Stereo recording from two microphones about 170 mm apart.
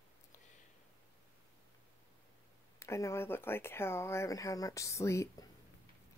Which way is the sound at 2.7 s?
15° left (ahead or behind).